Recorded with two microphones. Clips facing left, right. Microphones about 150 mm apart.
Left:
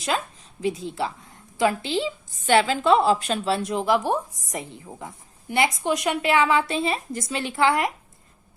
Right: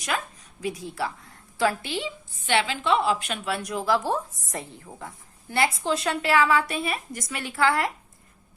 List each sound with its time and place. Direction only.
0.6 s a woman's voice: 25° left (ahead or behind)
2.5 s a woman's voice: 40° left (ahead or behind); by 7.9 s 20° left (ahead or behind)